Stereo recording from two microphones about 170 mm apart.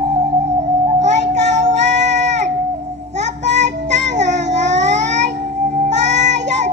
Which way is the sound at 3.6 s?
45° right (ahead or behind).